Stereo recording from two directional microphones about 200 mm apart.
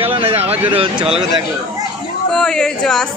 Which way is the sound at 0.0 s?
30° right (ahead or behind).